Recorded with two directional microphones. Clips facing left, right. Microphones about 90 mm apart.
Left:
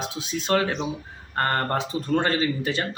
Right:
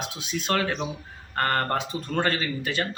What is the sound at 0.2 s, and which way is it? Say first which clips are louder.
Speech: left 3 dB; 30° left (ahead or behind).